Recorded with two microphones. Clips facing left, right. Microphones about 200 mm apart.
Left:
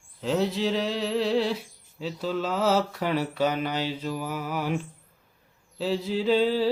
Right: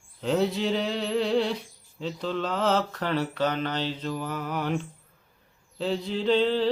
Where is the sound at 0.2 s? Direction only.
Centre (ahead or behind).